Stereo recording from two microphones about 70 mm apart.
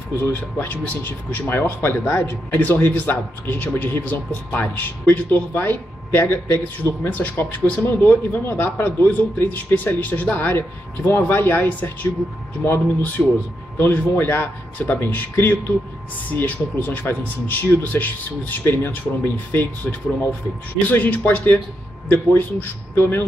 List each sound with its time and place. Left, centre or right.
0.6 s speech: left
13.2 s a man's voice: centre
13.7 s speech: left